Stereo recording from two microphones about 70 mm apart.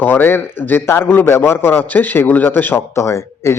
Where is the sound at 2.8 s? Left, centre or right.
Left.